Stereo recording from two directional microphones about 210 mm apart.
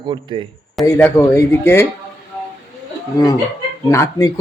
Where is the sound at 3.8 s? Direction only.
15° left (ahead or behind).